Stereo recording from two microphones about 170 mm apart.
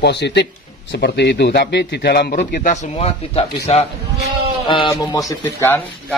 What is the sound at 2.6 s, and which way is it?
Speech, 40° left (ahead or behind).